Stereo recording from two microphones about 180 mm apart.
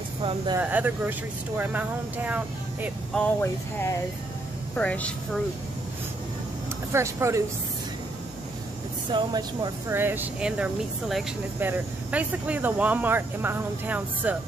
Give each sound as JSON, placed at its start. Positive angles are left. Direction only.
{"t": 0.2, "sound": "speech", "side_deg": -30}
{"t": 0.6, "sound": "speech", "side_deg": -10}
{"t": 3.2, "sound": "speech", "side_deg": 10}
{"t": 6.9, "sound": "speech", "side_deg": -15}
{"t": 9.1, "sound": "speech", "side_deg": -25}